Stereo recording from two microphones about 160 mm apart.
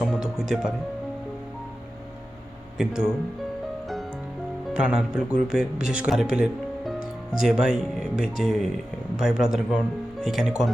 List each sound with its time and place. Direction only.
0.0 s music: centre (ahead or behind)
2.7 s speech: 5° right (ahead or behind)
4.7 s speech: 5° right (ahead or behind)